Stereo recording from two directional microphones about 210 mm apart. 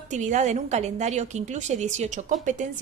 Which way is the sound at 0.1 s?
35° right (ahead or behind).